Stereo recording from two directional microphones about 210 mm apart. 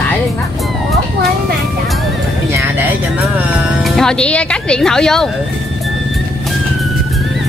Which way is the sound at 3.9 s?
5° left (ahead or behind).